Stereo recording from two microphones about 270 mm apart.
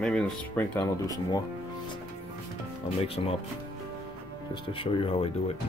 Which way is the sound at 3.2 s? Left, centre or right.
Left.